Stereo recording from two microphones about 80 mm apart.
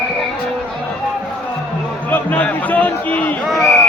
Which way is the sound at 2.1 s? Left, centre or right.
Left.